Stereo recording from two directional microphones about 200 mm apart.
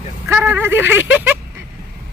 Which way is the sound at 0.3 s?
10° right (ahead or behind).